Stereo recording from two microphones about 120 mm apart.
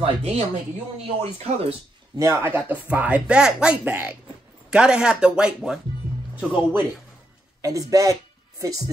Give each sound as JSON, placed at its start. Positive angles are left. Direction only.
{"t": 0.0, "sound": "speech", "side_deg": -60}
{"t": 2.1, "sound": "speech", "side_deg": -25}
{"t": 6.3, "sound": "speech", "side_deg": -20}